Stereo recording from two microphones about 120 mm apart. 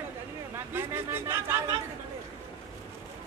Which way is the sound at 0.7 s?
20° right (ahead or behind).